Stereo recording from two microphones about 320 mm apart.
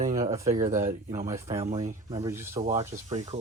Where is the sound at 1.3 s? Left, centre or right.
Centre.